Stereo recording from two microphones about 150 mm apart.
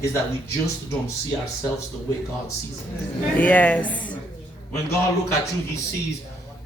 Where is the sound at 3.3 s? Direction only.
10° left (ahead or behind).